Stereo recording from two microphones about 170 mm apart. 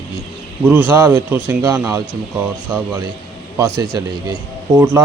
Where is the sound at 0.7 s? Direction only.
15° right (ahead or behind).